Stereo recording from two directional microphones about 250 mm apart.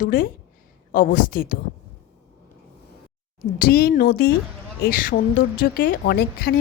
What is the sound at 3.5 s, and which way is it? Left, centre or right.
A woman's voice, left.